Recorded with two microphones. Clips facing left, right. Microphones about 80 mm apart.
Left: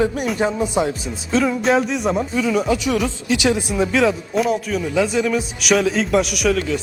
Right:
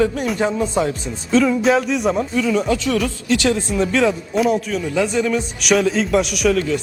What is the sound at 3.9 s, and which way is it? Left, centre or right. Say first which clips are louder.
A man's voice: even; centre.